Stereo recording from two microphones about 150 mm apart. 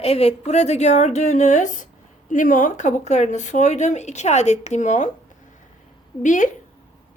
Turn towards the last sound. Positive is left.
turn(degrees=55)  # may be behind; listen again after turning